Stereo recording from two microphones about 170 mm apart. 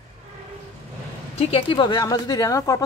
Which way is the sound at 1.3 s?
35° left (ahead or behind).